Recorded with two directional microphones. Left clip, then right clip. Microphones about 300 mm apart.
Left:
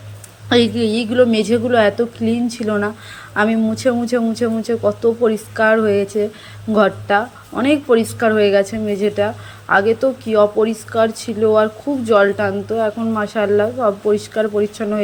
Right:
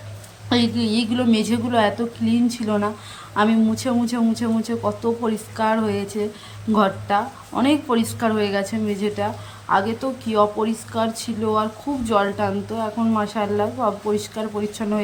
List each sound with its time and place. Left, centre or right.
0.4 s a woman's voice: centre